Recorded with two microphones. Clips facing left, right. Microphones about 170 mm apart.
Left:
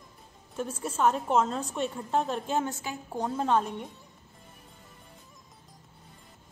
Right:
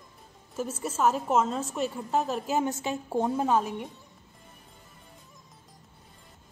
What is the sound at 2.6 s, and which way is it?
Speech, 20° right (ahead or behind).